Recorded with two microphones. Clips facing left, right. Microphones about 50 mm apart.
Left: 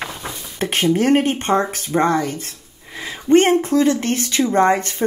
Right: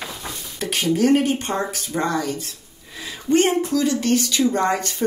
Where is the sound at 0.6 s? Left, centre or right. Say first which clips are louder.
Left 2 dB; left.